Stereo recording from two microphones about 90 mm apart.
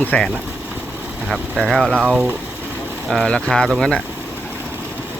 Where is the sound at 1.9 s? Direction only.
15° right (ahead or behind).